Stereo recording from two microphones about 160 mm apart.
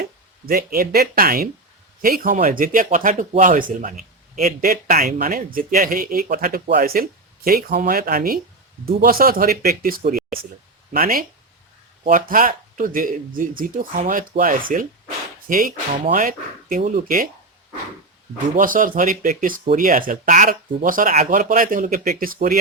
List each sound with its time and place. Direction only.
0.4 s speech: 70° right (ahead or behind)
18.5 s speech: 60° right (ahead or behind)